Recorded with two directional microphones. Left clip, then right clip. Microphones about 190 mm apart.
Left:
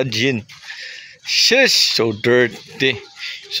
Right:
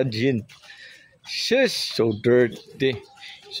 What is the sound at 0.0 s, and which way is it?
Speech, centre (ahead or behind).